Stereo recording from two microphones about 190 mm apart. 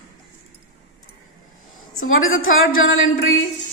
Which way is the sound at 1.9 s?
90° left.